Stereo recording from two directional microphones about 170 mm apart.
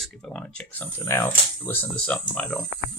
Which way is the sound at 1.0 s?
15° left (ahead or behind).